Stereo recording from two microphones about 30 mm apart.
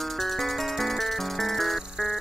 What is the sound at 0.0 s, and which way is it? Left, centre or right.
Music, centre.